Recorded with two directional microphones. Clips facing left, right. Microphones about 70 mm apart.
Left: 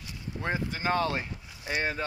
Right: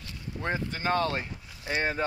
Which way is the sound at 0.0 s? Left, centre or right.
Centre.